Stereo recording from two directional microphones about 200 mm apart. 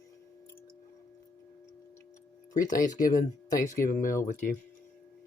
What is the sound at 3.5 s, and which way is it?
Speech, 45° left (ahead or behind).